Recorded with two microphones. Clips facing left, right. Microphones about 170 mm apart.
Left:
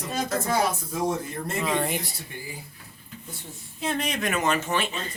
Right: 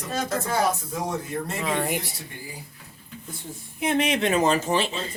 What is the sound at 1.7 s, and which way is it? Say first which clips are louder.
Speech: right 1 dB; 5° right (ahead or behind).